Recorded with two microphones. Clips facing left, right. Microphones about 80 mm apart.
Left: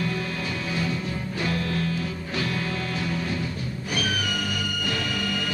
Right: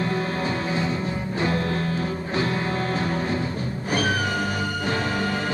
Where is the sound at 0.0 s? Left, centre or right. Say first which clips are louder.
Right 4 dB; right.